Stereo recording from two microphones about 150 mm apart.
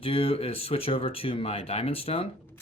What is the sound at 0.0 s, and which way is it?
Speech, 40° left (ahead or behind).